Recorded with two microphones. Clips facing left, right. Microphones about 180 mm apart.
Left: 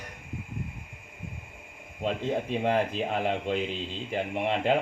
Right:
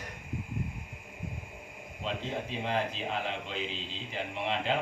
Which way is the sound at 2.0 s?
50° left (ahead or behind).